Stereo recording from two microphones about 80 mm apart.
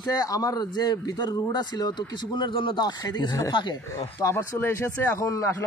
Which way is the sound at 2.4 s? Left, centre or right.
Left.